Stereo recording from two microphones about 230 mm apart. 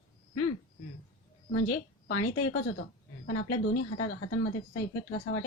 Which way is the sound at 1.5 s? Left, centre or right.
Left.